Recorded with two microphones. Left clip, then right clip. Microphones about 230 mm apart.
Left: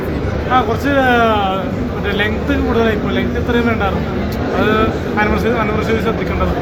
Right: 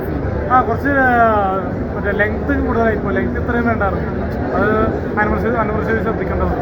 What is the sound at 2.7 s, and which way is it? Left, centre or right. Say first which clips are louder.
Speech: even; centre.